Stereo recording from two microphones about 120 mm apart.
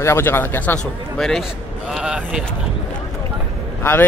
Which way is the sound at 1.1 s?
5° left (ahead or behind).